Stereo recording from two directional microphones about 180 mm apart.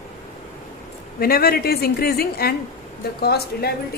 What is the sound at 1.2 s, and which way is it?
A woman's voice, 55° left (ahead or behind).